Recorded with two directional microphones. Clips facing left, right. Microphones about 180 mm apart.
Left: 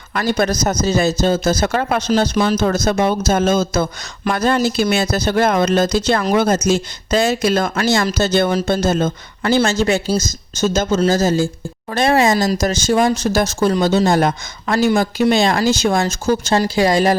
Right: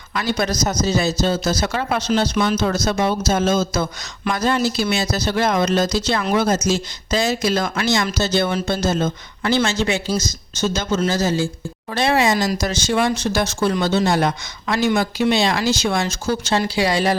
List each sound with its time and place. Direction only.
0.1 s speech: 50° left (ahead or behind)